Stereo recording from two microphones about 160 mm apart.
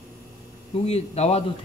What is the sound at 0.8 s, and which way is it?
Speech, 40° left (ahead or behind).